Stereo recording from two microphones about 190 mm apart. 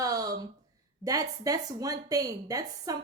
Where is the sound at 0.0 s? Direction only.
20° right (ahead or behind).